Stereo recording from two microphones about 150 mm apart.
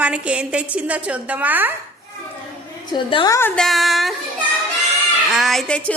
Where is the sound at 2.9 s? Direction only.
30° left (ahead or behind).